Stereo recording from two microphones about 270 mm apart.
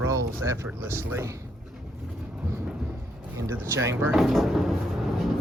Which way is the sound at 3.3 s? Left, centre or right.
Centre.